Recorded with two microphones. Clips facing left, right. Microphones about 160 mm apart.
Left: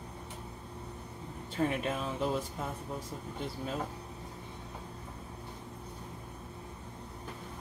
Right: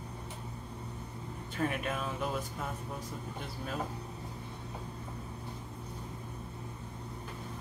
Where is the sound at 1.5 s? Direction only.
30° left (ahead or behind).